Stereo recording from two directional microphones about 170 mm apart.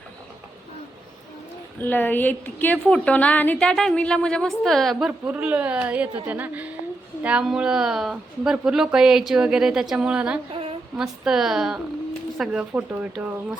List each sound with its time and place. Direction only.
1.8 s a woman's voice: 10° left (ahead or behind); by 10.4 s 5° right (ahead or behind)
10.5 s a sound: 35° right (ahead or behind)
10.9 s a woman's voice: 5° right (ahead or behind)